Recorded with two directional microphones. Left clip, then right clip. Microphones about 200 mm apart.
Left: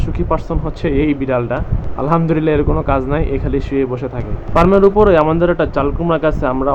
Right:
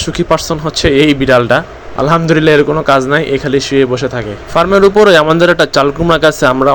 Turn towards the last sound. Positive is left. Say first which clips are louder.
# right 7 dB
turn(degrees=-35)  # may be behind; listen again after turning